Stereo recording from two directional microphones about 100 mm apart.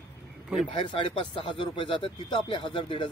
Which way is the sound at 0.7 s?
55° left (ahead or behind).